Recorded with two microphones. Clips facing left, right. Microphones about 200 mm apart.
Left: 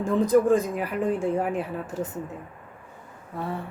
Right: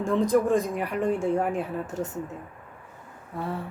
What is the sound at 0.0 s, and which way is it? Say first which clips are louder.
A woman's voice: left 2 dB; centre (ahead or behind).